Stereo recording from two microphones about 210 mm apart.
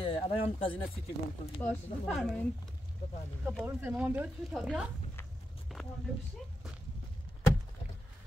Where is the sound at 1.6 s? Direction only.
Centre (ahead or behind).